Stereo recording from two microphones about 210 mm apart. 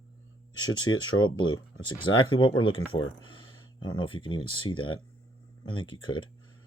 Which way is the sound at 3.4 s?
80° left.